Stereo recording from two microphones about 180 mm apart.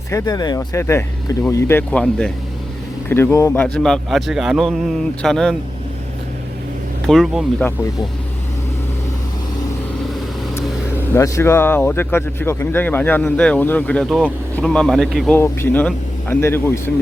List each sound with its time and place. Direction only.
0.1 s a man's voice: 20° left (ahead or behind); by 5.5 s 5° left (ahead or behind)
7.1 s a man's voice: centre (ahead or behind)
11.1 s a man's voice: 15° left (ahead or behind)